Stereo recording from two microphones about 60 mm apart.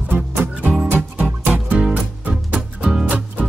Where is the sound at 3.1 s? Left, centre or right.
Right.